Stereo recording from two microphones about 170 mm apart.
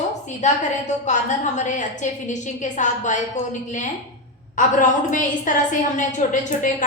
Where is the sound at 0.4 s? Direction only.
45° left (ahead or behind).